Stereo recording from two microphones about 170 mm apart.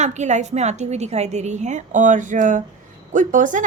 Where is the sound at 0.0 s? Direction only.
45° right (ahead or behind).